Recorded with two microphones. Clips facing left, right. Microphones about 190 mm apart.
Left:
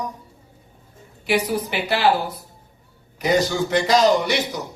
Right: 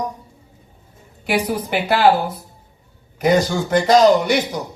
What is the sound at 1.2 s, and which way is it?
Speech, 50° right (ahead or behind).